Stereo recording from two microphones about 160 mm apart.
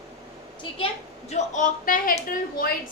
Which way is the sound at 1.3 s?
50° left (ahead or behind).